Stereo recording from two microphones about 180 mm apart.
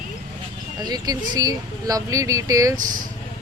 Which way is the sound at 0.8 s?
20° right (ahead or behind).